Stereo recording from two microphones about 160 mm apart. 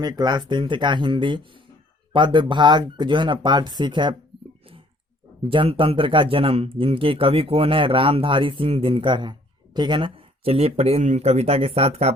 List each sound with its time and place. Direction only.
0.0 s speech: 25° right (ahead or behind)
5.5 s speech: 35° right (ahead or behind)